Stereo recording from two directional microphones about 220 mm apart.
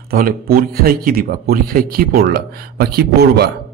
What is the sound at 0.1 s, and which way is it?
Speech, 40° right (ahead or behind).